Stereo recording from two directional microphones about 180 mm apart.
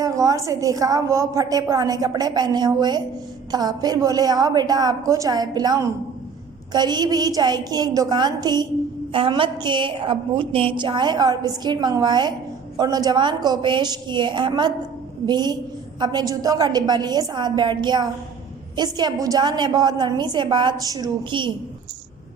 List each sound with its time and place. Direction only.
0.0 s a woman's voice: 20° right (ahead or behind)